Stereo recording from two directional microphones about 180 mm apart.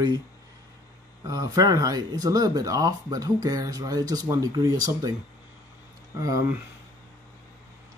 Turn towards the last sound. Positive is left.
turn(degrees=-20)  # may be behind; listen again after turning